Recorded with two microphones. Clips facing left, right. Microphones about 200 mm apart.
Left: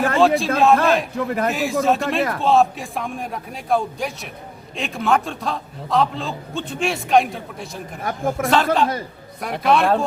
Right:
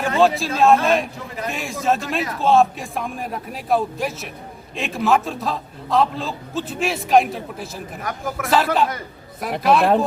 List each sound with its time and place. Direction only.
0.0 s a man's voice: centre (ahead or behind)
1.1 s a man's voice: 55° left (ahead or behind)
1.5 s a man's voice: centre (ahead or behind)
8.0 s a man's voice: 30° left (ahead or behind)
8.4 s a man's voice: 5° right (ahead or behind)